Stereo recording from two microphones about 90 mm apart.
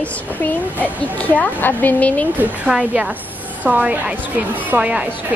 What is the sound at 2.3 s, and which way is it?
A woman's voice, 20° right (ahead or behind).